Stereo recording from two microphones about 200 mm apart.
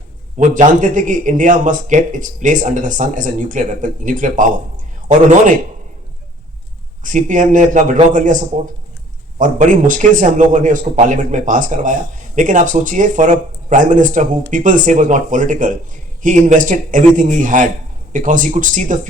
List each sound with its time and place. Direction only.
0.3 s speech: 40° right (ahead or behind)
7.0 s speech: 40° right (ahead or behind)